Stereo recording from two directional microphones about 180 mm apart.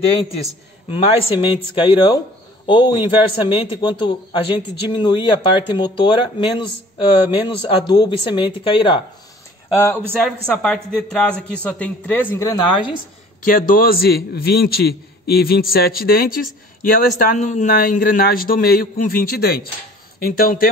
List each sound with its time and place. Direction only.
0.8 s speech: 30° left (ahead or behind)
9.8 s a man's voice: 10° left (ahead or behind)
10.1 s a man's voice: centre (ahead or behind); by 12.8 s 20° left (ahead or behind)
13.5 s a man's voice: 50° left (ahead or behind)